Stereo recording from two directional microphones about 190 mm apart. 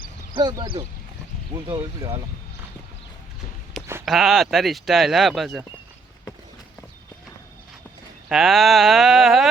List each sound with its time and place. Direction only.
0.3 s speech: 20° right (ahead or behind)
4.0 s speech: centre (ahead or behind)
8.3 s speech: centre (ahead or behind)